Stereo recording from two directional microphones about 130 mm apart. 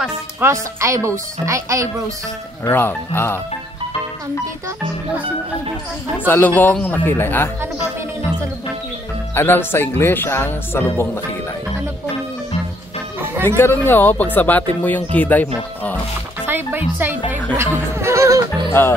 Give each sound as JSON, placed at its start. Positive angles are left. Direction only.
{"t": 0.4, "sound": "speech", "side_deg": -20}
{"t": 2.6, "sound": "speech", "side_deg": 15}
{"t": 6.1, "sound": "speech", "side_deg": 15}
{"t": 9.3, "sound": "speech", "side_deg": 15}
{"t": 13.6, "sound": "speech", "side_deg": 15}
{"t": 16.4, "sound": "music", "side_deg": -15}
{"t": 18.7, "sound": "speech", "side_deg": 20}